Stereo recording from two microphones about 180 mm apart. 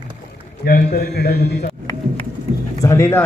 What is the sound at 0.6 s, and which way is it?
A man's voice, 60° left (ahead or behind).